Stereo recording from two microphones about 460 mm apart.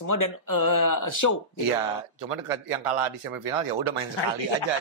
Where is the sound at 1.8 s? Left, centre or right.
Right.